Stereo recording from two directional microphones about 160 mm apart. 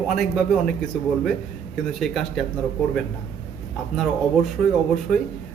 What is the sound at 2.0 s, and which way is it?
Speech, centre (ahead or behind).